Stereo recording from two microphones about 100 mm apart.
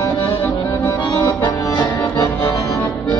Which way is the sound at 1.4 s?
35° left (ahead or behind).